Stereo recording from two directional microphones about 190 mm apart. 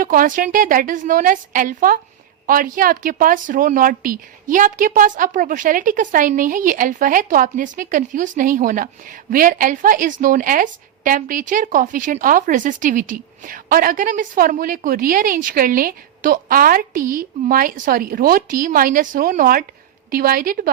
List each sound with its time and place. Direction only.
0.0 s speech: 45° right (ahead or behind)